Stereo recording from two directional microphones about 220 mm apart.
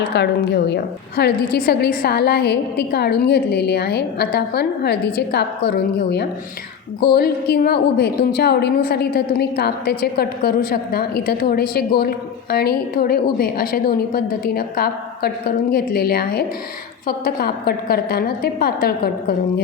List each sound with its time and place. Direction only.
0.2 s a woman's voice: 50° left (ahead or behind)